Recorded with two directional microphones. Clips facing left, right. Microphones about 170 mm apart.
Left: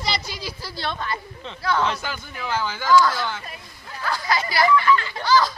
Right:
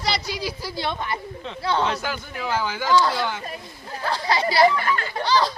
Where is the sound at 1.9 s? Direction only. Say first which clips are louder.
Right 2 dB; 5° right (ahead or behind).